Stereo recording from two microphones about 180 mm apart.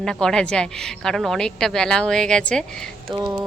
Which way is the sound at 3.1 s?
20° right (ahead or behind).